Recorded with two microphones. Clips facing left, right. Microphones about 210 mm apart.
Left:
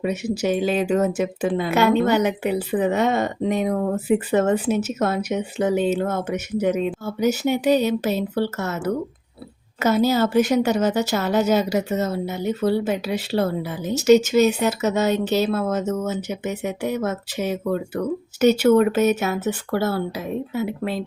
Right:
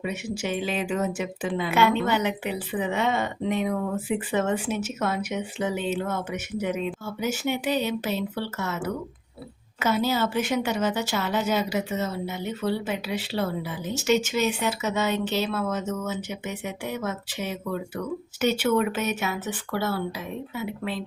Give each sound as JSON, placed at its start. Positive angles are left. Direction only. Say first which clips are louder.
{"t": 0.0, "sound": "speech", "louder": "left 7 dB", "side_deg": 40}